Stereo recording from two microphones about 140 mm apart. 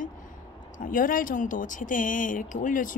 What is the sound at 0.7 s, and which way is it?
Speech, 75° left (ahead or behind).